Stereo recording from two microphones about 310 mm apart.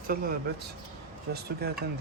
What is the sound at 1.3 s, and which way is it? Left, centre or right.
Speech, right.